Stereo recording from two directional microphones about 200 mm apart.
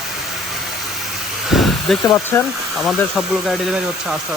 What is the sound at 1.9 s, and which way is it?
Speech, centre (ahead or behind).